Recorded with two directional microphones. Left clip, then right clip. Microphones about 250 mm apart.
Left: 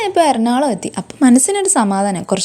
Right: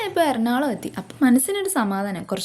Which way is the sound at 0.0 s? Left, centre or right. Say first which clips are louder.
Left 8 dB; left.